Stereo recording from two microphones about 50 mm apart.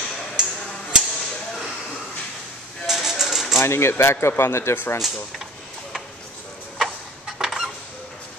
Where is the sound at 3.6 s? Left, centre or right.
Left.